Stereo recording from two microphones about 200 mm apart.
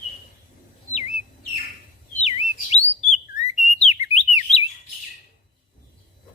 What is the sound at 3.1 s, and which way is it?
Whistling, 35° left (ahead or behind).